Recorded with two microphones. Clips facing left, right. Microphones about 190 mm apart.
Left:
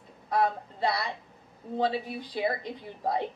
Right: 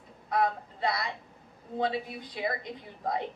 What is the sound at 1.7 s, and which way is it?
Speech, 35° left (ahead or behind).